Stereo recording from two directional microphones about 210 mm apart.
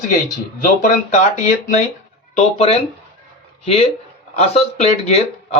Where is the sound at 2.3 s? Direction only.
30° left (ahead or behind).